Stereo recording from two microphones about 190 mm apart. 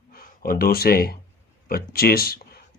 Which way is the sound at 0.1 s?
50° left (ahead or behind).